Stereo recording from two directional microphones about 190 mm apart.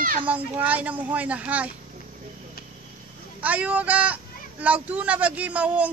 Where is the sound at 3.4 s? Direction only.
10° right (ahead or behind).